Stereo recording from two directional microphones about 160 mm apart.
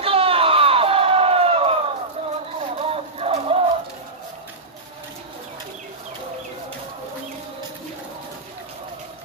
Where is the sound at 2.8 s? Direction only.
40° right (ahead or behind).